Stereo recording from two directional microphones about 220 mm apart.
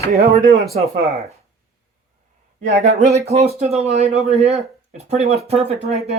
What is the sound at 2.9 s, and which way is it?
Speech, 30° right (ahead or behind).